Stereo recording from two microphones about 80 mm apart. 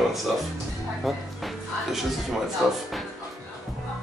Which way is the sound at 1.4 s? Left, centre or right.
Centre.